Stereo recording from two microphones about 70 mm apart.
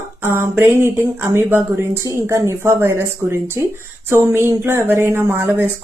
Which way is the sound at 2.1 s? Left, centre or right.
Right.